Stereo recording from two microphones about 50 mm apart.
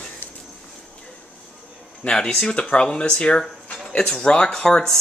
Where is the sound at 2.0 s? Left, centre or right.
Centre.